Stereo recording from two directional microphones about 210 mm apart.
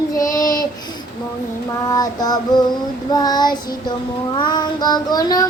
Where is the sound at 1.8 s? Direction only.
20° left (ahead or behind).